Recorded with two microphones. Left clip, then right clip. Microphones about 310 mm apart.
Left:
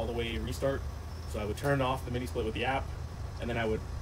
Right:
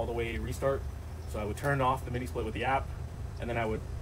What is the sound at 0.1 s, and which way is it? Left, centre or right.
Speech, centre.